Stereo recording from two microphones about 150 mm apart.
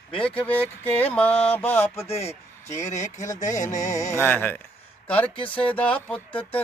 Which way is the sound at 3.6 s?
55° left (ahead or behind).